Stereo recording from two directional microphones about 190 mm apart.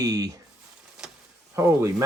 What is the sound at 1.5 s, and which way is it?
Speech, 15° right (ahead or behind).